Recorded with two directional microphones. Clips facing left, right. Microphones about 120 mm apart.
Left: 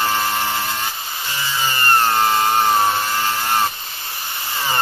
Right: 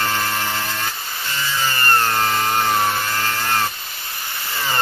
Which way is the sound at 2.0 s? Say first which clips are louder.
Left 6 dB; 20° left (ahead or behind).